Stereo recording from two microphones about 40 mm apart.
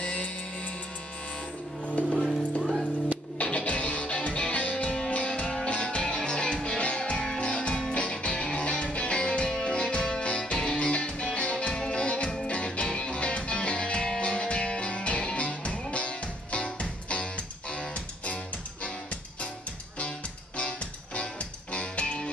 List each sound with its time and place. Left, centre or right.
0.0 s music: left
2.6 s music: centre
3.3 s music: left
20.5 s music: left